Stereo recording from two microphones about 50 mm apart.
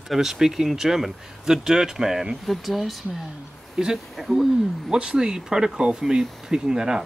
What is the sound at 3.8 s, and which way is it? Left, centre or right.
Speech, centre.